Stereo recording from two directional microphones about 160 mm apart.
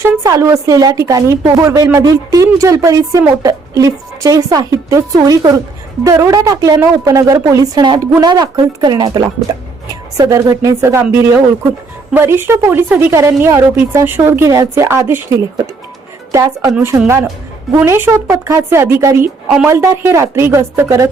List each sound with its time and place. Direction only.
0.0 s a woman's voice: 20° right (ahead or behind)
17.7 s a woman's voice: 15° right (ahead or behind)